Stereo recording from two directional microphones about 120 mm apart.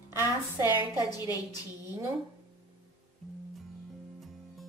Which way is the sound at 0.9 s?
35° left (ahead or behind).